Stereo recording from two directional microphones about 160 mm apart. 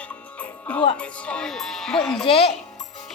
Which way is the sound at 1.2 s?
5° left (ahead or behind).